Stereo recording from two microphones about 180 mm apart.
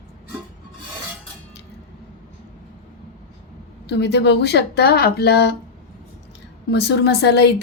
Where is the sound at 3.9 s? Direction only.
70° left (ahead or behind).